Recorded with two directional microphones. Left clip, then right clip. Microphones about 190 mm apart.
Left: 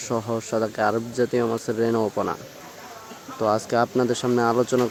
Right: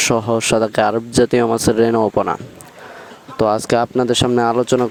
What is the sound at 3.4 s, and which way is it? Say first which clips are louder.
Speech: right 6 dB; 45° right (ahead or behind).